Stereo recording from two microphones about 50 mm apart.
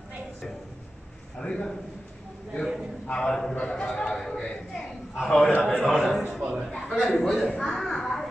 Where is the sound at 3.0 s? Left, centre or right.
Centre.